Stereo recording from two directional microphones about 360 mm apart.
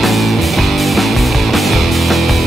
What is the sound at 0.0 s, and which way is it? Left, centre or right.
Music, centre.